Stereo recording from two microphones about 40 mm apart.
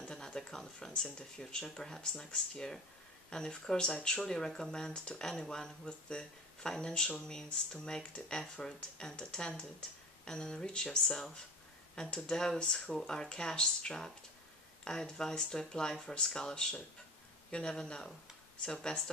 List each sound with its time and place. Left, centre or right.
0.1 s speech: centre
8.4 s speech: centre